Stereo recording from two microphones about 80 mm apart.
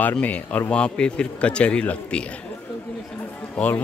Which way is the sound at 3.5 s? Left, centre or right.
Left.